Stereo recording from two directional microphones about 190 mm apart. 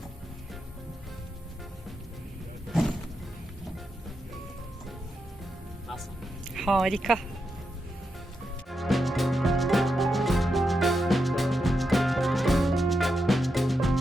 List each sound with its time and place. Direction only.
2.6 s a sound: centre (ahead or behind)
6.5 s speech: centre (ahead or behind)
8.7 s music: centre (ahead or behind)